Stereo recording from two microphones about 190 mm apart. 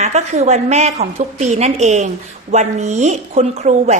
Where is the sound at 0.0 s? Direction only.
35° right (ahead or behind).